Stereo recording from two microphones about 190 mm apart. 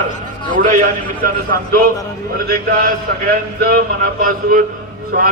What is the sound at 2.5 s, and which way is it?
A man's voice, 50° right (ahead or behind).